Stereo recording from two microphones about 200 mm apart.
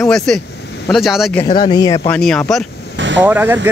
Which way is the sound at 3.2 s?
10° right (ahead or behind).